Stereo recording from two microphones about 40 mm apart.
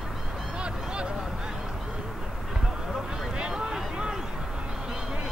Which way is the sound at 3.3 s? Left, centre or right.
Right.